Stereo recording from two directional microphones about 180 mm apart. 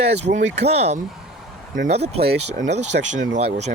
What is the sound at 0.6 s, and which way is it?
Speech, 35° right (ahead or behind).